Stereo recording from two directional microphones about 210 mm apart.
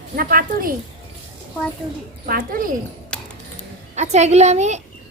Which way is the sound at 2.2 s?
45° right (ahead or behind).